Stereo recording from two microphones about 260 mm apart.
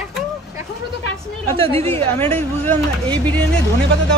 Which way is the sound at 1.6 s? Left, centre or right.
Right.